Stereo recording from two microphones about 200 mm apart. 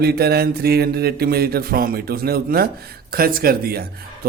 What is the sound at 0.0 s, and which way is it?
Speech, 50° right (ahead or behind).